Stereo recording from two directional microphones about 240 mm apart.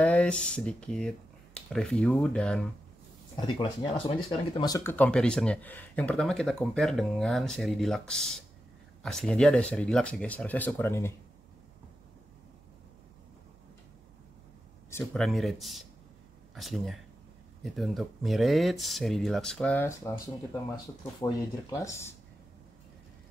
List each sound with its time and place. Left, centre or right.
0.0 s speech: centre
3.3 s speech: centre
14.9 s speech: centre